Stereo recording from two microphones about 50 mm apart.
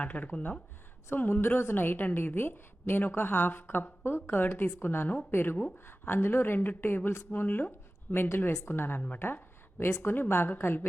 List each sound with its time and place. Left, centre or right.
0.0 s speech: left
1.1 s a woman's voice: left
9.1 s a sound: left
10.0 s a woman's voice: left